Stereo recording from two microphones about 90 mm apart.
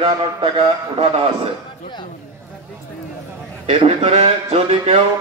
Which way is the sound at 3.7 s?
80° right.